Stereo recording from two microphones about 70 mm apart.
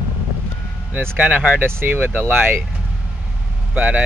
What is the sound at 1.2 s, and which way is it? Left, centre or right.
Speech, centre.